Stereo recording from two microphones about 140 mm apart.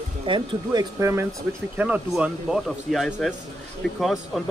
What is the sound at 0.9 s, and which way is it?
Speech, 20° right (ahead or behind).